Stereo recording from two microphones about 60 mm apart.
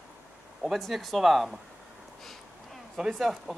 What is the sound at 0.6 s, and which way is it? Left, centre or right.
Speech, centre.